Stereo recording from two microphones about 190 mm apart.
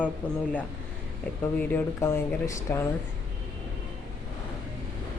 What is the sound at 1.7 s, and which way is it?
Speech, 15° left (ahead or behind).